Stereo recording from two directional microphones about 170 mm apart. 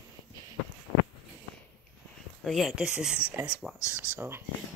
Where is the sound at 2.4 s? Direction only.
Centre (ahead or behind).